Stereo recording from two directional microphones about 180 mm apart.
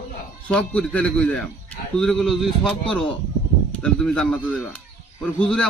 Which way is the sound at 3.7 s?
5° left (ahead or behind).